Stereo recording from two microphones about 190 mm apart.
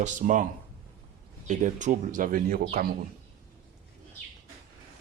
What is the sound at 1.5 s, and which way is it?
Speech, 40° right (ahead or behind).